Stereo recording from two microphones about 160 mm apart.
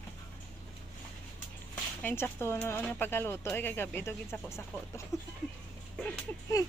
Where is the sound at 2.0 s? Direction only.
10° left (ahead or behind).